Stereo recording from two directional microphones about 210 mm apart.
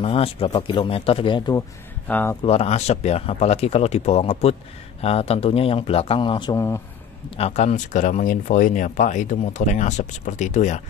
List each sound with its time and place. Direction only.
0.0 s speech: 25° left (ahead or behind)
2.0 s speech: 10° left (ahead or behind)
2.4 s speech: 30° left (ahead or behind); by 6.8 s 15° left (ahead or behind)
7.2 s speech: 30° left (ahead or behind)